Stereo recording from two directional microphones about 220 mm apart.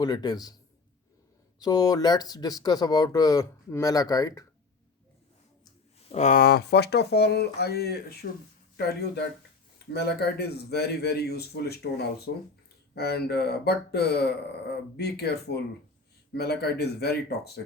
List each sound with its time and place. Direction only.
0.0 s speech: 20° left (ahead or behind)
1.6 s speech: 15° left (ahead or behind)
6.1 s speech: 30° left (ahead or behind); by 17.6 s 45° left (ahead or behind)